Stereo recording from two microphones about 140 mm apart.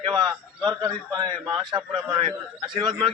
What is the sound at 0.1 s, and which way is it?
A man's voice, 30° right (ahead or behind).